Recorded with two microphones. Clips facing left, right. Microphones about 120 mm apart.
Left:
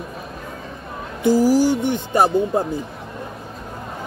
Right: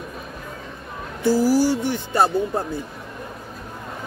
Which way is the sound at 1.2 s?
15° left (ahead or behind).